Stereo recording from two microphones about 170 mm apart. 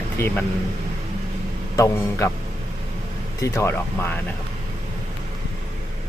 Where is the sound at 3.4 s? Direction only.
15° left (ahead or behind).